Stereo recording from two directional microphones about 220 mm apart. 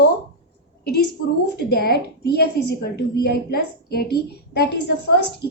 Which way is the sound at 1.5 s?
45° left (ahead or behind).